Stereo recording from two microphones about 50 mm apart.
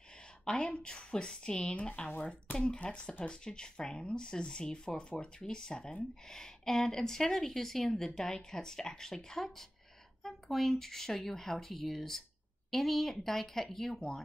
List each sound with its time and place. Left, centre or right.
0.5 s speech: centre